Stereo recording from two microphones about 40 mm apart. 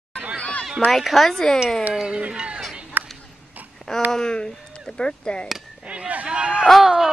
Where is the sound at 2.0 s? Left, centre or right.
Right.